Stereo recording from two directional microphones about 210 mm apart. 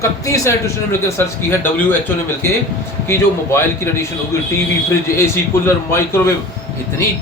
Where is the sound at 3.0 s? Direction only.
10° left (ahead or behind).